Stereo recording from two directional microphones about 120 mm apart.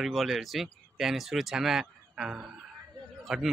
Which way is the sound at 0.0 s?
Centre (ahead or behind).